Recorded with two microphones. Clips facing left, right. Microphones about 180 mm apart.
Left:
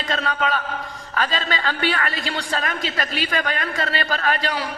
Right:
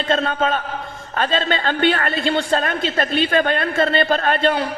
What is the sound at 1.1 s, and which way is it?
A woman's voice, 30° right (ahead or behind).